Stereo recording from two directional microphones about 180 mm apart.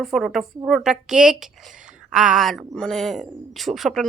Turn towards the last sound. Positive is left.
turn(degrees=0)  # may be behind; listen again after turning